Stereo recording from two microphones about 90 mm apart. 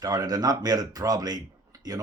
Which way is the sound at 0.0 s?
45° right (ahead or behind).